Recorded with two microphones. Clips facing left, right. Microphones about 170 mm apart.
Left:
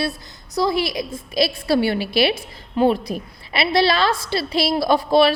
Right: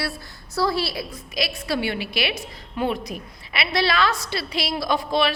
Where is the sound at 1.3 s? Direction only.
30° left (ahead or behind).